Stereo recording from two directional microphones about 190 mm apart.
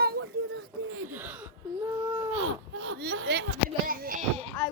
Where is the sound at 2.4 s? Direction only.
90° right; by 3.4 s 60° right (ahead or behind).